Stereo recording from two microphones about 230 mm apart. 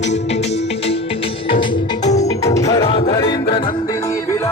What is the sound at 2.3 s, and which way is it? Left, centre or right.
Music, centre.